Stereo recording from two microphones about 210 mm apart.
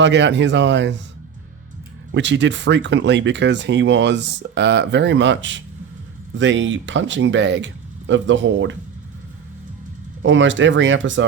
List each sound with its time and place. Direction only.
0.0 s speech: 60° right (ahead or behind)
2.1 s speech: 60° right (ahead or behind)
10.2 s speech: 60° right (ahead or behind)